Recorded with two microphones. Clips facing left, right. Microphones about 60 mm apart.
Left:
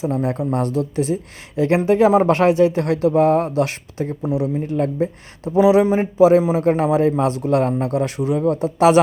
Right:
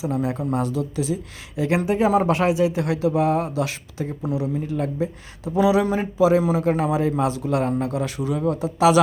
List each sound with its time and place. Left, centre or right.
0.0 s a man's voice: left
4.2 s a man's voice: left
4.6 s speech: left
5.5 s a man's voice: left